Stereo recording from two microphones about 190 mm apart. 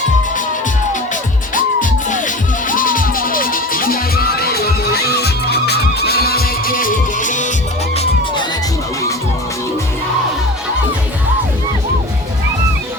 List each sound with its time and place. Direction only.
1.1 s music: 45° left (ahead or behind)